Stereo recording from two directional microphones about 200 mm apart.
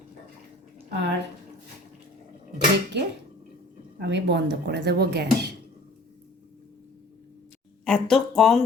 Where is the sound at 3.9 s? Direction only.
60° right (ahead or behind).